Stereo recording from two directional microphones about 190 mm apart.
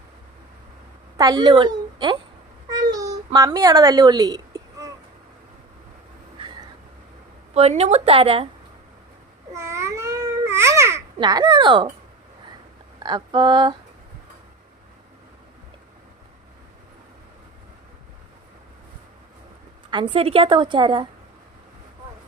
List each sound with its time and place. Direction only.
1.1 s a woman's voice: 20° right (ahead or behind)
2.6 s a sound: 20° right (ahead or behind)
3.3 s a child's voice: 20° right (ahead or behind)
6.4 s a sound: 25° right (ahead or behind)
7.5 s a woman's voice: 35° right (ahead or behind)
9.5 s babbling: 15° right (ahead or behind)
13.0 s a woman's voice: 20° right (ahead or behind)
19.9 s a woman's voice: 25° right (ahead or behind)